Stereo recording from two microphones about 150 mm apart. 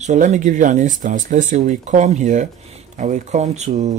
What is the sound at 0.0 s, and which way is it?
Speech, 50° right (ahead or behind).